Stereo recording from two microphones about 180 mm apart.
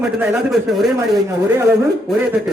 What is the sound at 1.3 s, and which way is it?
Speech, 15° right (ahead or behind).